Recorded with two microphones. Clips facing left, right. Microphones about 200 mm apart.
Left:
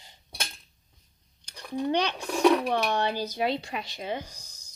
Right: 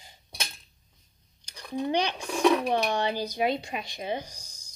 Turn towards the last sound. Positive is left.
turn(degrees=-15)  # may be behind; listen again after turning